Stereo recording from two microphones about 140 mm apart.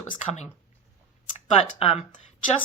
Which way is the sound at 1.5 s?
45° left (ahead or behind).